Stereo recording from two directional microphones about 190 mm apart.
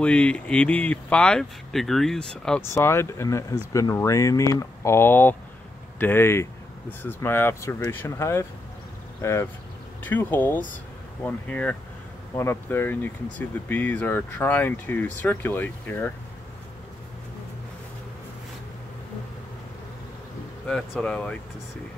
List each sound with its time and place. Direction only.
0.0 s speech: 5° left (ahead or behind)
20.6 s speech: 5° left (ahead or behind)